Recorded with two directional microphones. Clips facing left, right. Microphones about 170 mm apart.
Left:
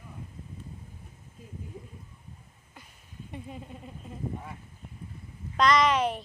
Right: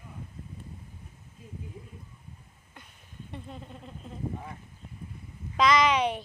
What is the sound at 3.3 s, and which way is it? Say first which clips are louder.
Speech: left 1 dB; 10° left (ahead or behind).